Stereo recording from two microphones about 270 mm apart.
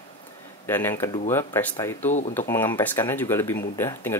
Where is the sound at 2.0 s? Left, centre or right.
Left.